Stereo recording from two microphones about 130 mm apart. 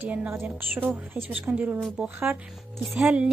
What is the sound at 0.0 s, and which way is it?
Speech, 10° right (ahead or behind).